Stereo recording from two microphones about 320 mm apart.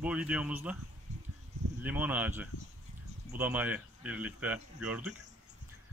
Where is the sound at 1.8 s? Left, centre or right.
Centre.